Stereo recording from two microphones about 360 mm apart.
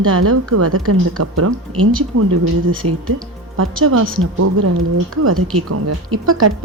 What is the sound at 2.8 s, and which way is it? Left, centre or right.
A woman's voice, right.